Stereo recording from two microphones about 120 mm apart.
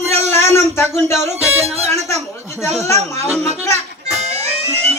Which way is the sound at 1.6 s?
60° right (ahead or behind).